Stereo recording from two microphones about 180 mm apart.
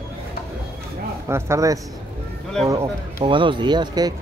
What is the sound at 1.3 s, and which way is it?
Speech, 15° right (ahead or behind).